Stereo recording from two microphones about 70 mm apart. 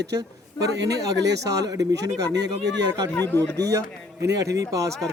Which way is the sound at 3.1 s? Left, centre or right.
Left.